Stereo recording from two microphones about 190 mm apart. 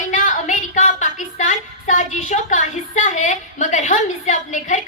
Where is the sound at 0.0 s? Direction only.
40° left (ahead or behind).